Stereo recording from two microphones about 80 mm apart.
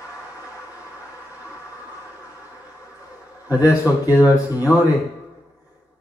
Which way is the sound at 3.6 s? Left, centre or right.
Left.